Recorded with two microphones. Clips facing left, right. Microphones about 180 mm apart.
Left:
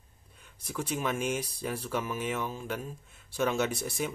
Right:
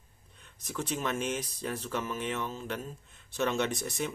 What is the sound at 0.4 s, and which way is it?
Speech, 10° left (ahead or behind).